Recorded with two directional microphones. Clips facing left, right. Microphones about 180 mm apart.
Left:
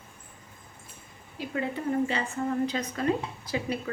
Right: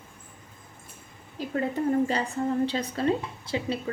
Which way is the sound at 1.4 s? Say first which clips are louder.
Right 2 dB; 40° right (ahead or behind).